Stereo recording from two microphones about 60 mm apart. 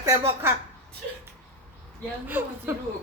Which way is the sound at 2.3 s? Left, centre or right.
Right.